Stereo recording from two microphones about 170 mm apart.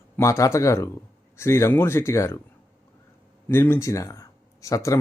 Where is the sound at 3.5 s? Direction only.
15° left (ahead or behind).